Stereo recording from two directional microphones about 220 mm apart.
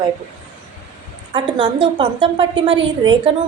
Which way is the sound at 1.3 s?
20° right (ahead or behind).